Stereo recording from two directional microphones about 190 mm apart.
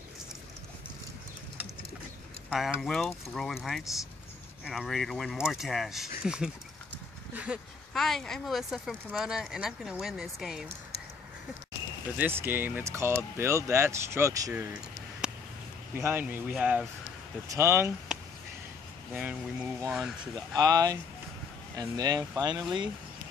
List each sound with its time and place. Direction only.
2.8 s speech: centre (ahead or behind)
12.2 s speech: 10° right (ahead or behind)
15.2 s a sound: 5° right (ahead or behind)
15.9 s speech: 10° right (ahead or behind)
19.1 s speech: 5° right (ahead or behind)
20.5 s speech: 20° right (ahead or behind)